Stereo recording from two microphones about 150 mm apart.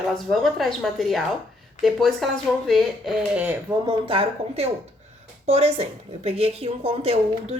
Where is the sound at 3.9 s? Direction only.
35° right (ahead or behind).